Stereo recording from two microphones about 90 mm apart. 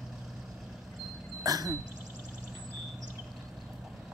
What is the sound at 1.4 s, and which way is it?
Sneeze, 40° right (ahead or behind).